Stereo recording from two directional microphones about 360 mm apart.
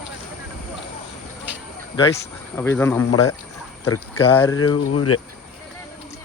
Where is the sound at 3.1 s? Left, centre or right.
Left.